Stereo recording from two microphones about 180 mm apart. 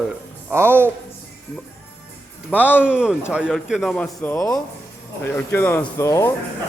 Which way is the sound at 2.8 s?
5° right (ahead or behind).